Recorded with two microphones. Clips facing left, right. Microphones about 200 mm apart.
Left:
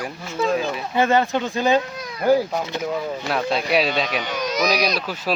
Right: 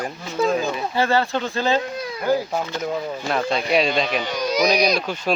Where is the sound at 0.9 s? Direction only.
20° left (ahead or behind).